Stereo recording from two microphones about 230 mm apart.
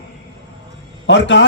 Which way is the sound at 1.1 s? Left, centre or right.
Left.